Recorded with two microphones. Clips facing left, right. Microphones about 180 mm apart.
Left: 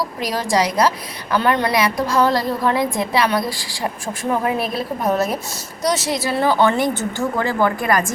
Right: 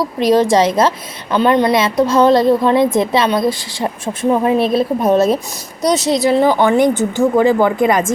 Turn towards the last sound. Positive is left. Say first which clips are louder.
# right 6 dB
turn(degrees=-20)  # may be behind; listen again after turning